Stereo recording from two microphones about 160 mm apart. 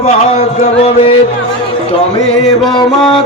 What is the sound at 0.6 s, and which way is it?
Music, 40° left (ahead or behind).